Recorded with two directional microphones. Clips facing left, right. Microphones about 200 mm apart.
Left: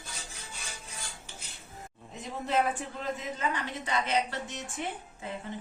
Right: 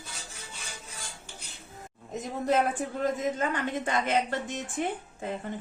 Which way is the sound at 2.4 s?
45° right (ahead or behind).